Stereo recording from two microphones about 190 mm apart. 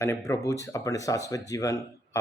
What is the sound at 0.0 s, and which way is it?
Speech, 15° left (ahead or behind).